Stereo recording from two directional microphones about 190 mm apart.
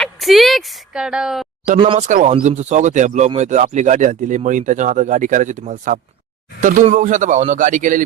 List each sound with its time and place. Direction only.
0.0 s a woman's voice: centre (ahead or behind)
1.8 s speech: 30° right (ahead or behind)
2.0 s speech: 40° right (ahead or behind)